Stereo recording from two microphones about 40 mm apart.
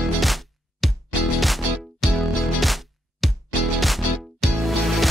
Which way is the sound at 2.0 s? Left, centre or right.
Centre.